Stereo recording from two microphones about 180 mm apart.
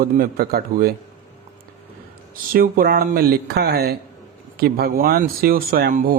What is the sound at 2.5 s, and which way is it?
Speech, 55° right (ahead or behind).